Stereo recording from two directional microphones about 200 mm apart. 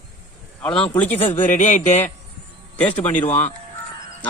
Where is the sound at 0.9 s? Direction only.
5° left (ahead or behind).